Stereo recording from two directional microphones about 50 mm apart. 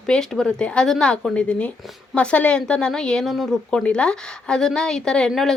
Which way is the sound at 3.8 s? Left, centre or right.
Left.